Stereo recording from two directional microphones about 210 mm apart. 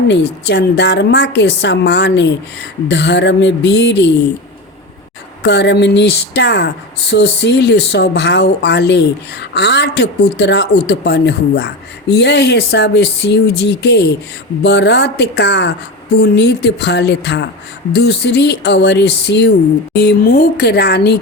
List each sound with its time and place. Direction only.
0.1 s a woman's voice: 55° left (ahead or behind)
5.4 s speech: 55° left (ahead or behind)